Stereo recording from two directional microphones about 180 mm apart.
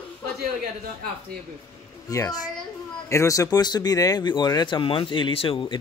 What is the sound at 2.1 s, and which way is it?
Speech, 20° left (ahead or behind).